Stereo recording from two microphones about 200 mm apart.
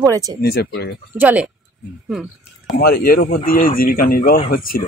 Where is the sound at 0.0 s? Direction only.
15° right (ahead or behind).